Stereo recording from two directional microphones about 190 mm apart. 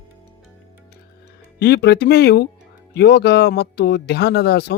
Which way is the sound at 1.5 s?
60° left (ahead or behind).